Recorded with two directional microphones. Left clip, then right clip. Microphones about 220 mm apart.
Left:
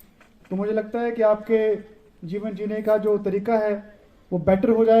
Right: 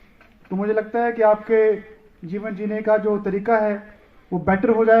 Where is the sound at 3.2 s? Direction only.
75° left (ahead or behind).